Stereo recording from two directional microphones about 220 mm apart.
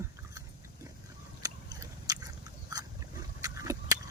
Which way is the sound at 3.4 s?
15° right (ahead or behind).